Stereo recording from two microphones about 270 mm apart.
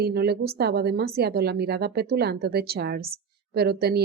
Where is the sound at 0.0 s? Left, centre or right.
Right.